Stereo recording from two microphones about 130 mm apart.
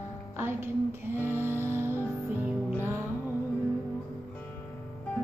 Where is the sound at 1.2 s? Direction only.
15° left (ahead or behind).